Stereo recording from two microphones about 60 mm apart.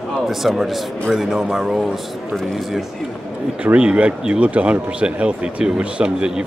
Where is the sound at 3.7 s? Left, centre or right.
Centre.